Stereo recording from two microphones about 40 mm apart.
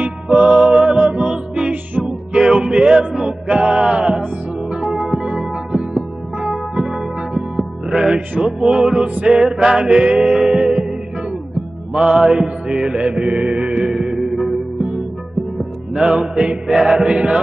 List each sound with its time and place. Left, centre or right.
0.0 s music: right
0.6 s a sound: right
2.3 s music: centre
4.8 s music: centre
5.2 s music: centre
11.9 s music: right
13.8 s music: centre